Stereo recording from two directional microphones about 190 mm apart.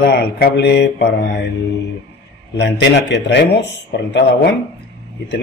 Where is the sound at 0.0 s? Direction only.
55° left (ahead or behind).